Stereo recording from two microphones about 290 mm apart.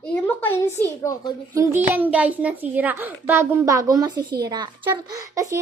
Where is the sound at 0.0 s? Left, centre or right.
Centre.